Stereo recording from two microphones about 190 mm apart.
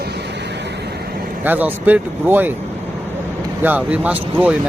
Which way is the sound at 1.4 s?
10° right (ahead or behind).